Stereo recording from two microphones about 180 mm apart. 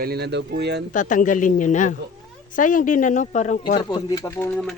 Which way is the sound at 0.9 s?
45° left (ahead or behind).